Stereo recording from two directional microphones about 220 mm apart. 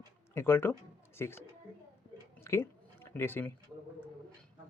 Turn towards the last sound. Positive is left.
turn(degrees=10)  # may be behind; listen again after turning